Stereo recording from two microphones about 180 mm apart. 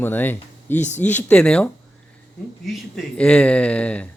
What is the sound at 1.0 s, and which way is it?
Speech, 10° left (ahead or behind).